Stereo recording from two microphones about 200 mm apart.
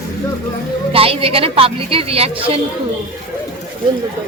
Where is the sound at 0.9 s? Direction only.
30° right (ahead or behind).